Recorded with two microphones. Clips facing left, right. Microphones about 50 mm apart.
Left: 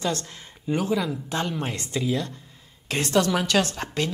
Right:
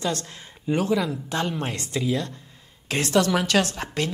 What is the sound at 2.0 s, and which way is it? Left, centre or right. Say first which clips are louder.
A woman's voice: right 1 dB; right.